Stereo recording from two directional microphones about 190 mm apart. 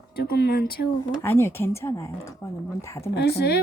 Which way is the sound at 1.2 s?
15° left (ahead or behind).